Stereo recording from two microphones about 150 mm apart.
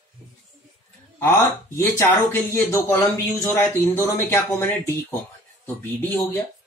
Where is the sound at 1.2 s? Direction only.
15° left (ahead or behind).